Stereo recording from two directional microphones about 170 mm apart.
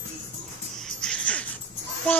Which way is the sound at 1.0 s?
5° left (ahead or behind).